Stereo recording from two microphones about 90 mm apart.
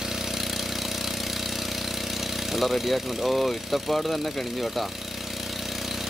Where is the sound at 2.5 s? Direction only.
Centre (ahead or behind).